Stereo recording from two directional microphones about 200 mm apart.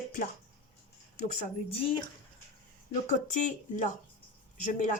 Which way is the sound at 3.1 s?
40° left (ahead or behind).